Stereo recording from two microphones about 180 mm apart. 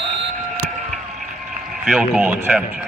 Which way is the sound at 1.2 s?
5° right (ahead or behind).